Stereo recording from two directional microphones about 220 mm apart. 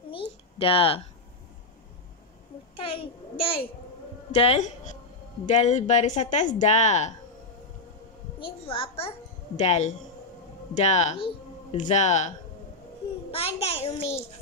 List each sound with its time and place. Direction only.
0.6 s a child's voice: 25° left (ahead or behind)
2.7 s a child's voice: 25° left (ahead or behind)
8.4 s a child's voice: 25° left (ahead or behind)